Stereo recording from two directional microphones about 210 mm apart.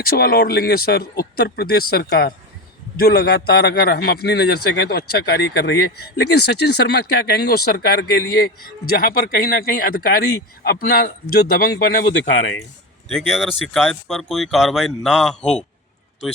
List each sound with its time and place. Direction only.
0.0 s a man's voice: 45° left (ahead or behind)
13.2 s speech: centre (ahead or behind)